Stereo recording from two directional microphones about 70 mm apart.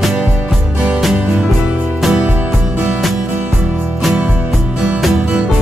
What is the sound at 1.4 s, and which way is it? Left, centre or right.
Music, centre.